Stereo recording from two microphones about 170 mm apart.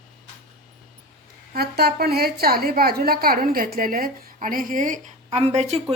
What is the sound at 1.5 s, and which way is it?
A woman's voice, 70° right (ahead or behind).